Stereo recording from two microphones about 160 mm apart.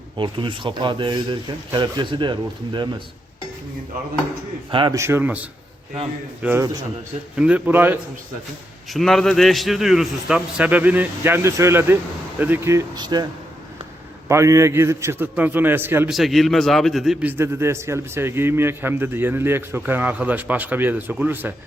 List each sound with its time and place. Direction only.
0.2 s speech: 30° right (ahead or behind)
4.7 s a man's voice: 30° right (ahead or behind)
4.9 s a man's voice: 15° right (ahead or behind)
8.9 s a man's voice: centre (ahead or behind); by 13.2 s 25° right (ahead or behind)
14.3 s a man's voice: 20° right (ahead or behind)
16.1 s a man's voice: centre (ahead or behind)